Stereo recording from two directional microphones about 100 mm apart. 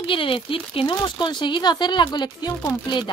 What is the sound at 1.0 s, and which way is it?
A woman's voice, 50° left (ahead or behind).